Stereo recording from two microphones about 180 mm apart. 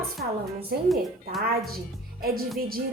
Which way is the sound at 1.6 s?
55° right (ahead or behind).